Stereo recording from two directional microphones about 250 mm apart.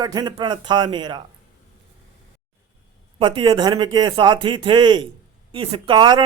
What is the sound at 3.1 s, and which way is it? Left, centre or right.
A man's voice, right.